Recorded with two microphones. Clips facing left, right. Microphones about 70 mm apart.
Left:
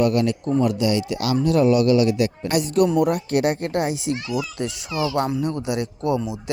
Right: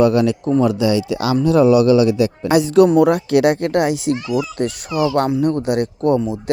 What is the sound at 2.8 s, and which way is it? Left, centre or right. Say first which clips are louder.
A child's voice: right 6 dB; right.